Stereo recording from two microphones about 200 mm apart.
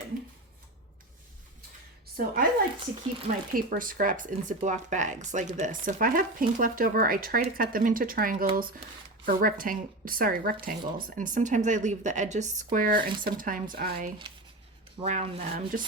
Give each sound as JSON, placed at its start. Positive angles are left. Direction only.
{"t": 2.1, "sound": "speech", "side_deg": -45}
{"t": 3.5, "sound": "speech", "side_deg": -45}
{"t": 15.0, "sound": "speech", "side_deg": -35}